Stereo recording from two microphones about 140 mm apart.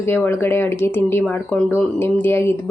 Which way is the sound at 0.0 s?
15° left (ahead or behind).